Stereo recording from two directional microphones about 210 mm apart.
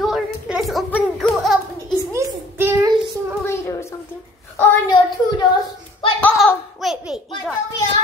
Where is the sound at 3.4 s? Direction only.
10° left (ahead or behind).